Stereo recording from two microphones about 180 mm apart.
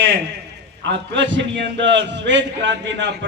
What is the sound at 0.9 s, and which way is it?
A man's voice, 90° right.